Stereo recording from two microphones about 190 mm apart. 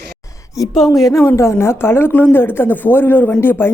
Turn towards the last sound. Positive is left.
turn(degrees=10)  # may be behind; listen again after turning